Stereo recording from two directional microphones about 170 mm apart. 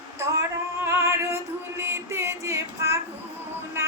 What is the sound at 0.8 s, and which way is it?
Music, 15° right (ahead or behind).